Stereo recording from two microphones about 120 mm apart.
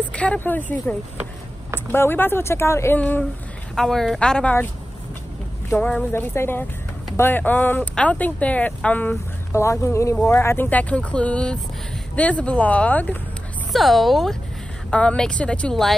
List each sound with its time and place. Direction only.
0.1 s speech: 10° left (ahead or behind)
3.0 s speech: 10° left (ahead or behind)
5.8 s speech: 10° left (ahead or behind)
9.5 s speech: 25° left (ahead or behind)
13.7 s speech: centre (ahead or behind)